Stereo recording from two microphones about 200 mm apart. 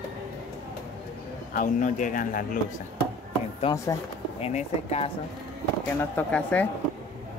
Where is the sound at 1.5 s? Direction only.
40° left (ahead or behind).